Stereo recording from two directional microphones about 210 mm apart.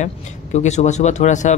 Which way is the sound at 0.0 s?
35° left (ahead or behind).